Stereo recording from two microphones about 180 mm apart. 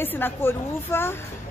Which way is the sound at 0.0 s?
10° left (ahead or behind).